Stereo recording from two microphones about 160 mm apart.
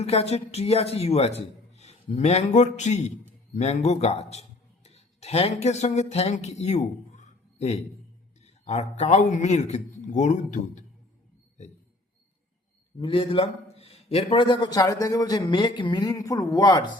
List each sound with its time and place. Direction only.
0.0 s a man's voice: 40° left (ahead or behind)
13.0 s a man's voice: 35° left (ahead or behind)